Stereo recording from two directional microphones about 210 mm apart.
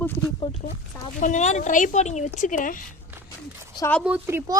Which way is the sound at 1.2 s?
35° left (ahead or behind).